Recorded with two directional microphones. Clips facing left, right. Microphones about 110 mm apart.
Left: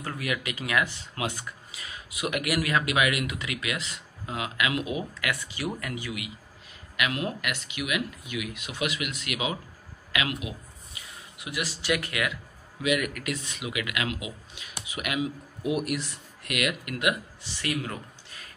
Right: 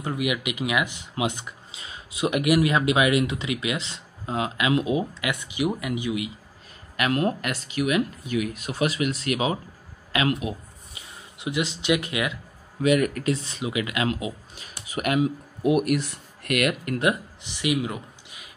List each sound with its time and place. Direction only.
0.0 s speech: 15° right (ahead or behind)
7.0 s speech: 40° right (ahead or behind)
11.0 s speech: 25° right (ahead or behind)
12.8 s speech: 40° right (ahead or behind)
17.4 s a man's voice: 15° right (ahead or behind)